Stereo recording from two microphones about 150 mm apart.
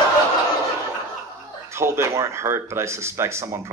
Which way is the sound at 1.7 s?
15° right (ahead or behind).